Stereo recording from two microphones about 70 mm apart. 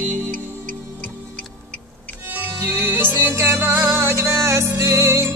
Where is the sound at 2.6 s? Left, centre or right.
Right.